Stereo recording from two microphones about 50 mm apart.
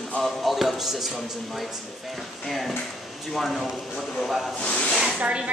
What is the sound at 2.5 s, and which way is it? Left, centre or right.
Speech, centre.